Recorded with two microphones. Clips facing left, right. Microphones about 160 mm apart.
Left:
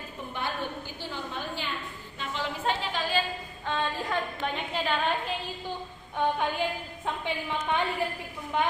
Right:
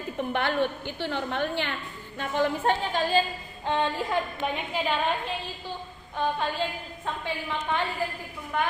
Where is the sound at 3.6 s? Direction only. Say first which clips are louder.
Right 4 dB; 20° right (ahead or behind).